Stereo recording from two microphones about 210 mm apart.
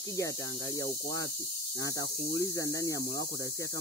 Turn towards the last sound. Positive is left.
turn(degrees=15)  # may be behind; listen again after turning